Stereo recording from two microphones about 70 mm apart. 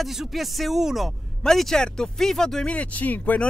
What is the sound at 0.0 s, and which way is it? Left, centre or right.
Speech, centre.